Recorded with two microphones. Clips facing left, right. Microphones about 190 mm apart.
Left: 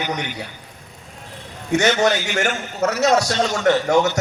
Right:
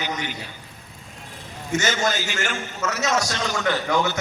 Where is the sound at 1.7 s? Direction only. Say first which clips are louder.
Left 6 dB; 65° left (ahead or behind).